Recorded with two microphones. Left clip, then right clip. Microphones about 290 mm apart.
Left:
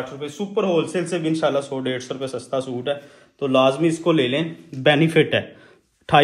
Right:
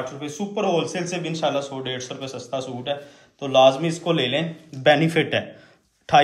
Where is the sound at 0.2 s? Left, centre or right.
Centre.